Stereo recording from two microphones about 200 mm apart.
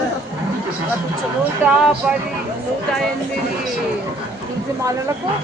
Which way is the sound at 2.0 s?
5° right (ahead or behind).